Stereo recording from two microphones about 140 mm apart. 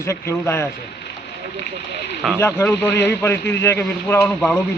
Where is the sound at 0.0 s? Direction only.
20° left (ahead or behind).